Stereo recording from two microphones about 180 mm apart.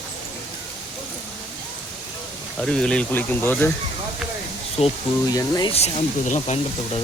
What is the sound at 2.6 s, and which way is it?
Speech, 5° left (ahead or behind).